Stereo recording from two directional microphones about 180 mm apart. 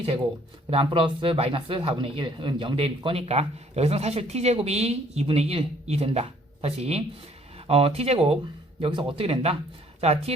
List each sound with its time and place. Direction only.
0.7 s speech: 30° right (ahead or behind)